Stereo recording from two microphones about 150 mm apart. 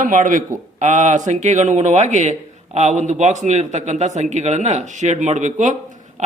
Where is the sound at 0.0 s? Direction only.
60° right (ahead or behind).